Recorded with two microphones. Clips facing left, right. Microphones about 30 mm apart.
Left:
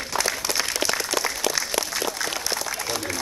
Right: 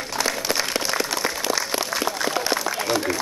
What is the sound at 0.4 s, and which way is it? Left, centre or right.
Applause, centre.